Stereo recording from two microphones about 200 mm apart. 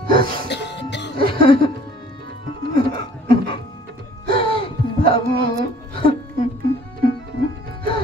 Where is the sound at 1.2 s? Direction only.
50° right (ahead or behind).